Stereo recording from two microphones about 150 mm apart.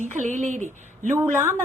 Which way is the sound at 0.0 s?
55° right (ahead or behind).